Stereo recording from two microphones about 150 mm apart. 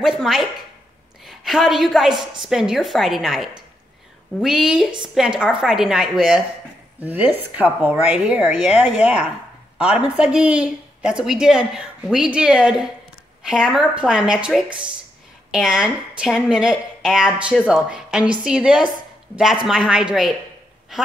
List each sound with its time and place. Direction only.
0.0 s a woman's voice: centre (ahead or behind)